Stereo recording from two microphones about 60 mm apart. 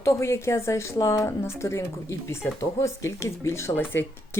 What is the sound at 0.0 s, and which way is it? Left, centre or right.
Speech, left.